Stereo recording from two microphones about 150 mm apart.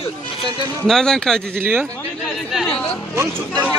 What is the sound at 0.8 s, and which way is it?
Speech, 5° left (ahead or behind).